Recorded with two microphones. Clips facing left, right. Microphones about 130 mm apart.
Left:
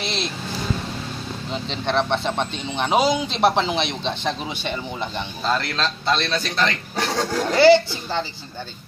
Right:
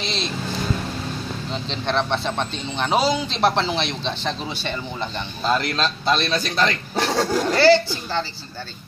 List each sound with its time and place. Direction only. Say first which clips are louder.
0.0 s vehicle: even; 15° left (ahead or behind)
1.5 s speech: left 1 dB; 10° left (ahead or behind)
5.5 s a man's voice: right 2 dB; 20° right (ahead or behind)
7.4 s a woman's voice: left 3 dB; 20° left (ahead or behind)